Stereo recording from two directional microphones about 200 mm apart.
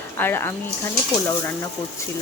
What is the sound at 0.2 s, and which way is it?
Speech, 10° left (ahead or behind).